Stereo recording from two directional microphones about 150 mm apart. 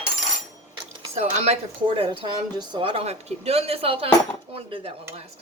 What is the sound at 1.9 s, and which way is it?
A woman's voice, 35° right (ahead or behind).